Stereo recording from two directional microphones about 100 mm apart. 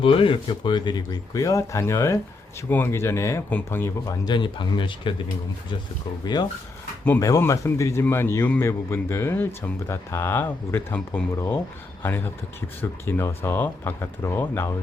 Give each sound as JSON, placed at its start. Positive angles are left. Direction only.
{"t": 0.0, "sound": "speech", "side_deg": 60}
{"t": 4.3, "sound": "speech", "side_deg": 55}
{"t": 6.2, "sound": "speech", "side_deg": 45}
{"t": 7.2, "sound": "speech", "side_deg": 30}